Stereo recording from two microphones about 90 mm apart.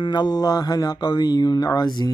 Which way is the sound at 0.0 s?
55° left (ahead or behind).